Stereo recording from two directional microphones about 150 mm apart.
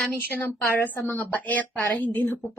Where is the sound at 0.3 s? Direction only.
15° left (ahead or behind).